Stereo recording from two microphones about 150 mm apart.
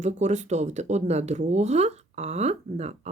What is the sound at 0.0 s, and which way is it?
Speech, 50° right (ahead or behind).